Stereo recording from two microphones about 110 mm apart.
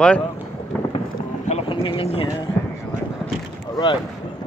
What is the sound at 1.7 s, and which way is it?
Speech, 50° left (ahead or behind).